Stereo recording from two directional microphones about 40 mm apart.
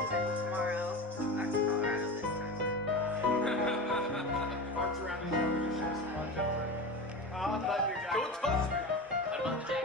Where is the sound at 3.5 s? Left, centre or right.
Centre.